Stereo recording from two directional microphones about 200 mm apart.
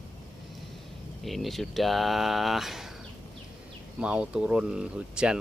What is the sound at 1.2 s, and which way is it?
Speech, centre (ahead or behind).